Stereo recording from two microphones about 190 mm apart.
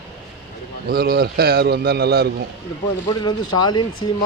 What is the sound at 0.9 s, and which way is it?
A man's voice, 55° right (ahead or behind).